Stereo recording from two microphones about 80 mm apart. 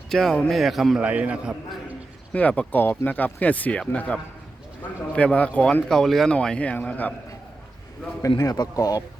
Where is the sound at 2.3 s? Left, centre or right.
Centre.